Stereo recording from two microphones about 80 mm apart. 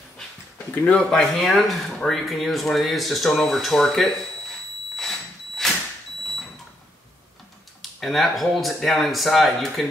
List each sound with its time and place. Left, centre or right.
0.8 s speech: centre
1.3 s speech: centre
5.6 s vehicle: centre
8.0 s speech: centre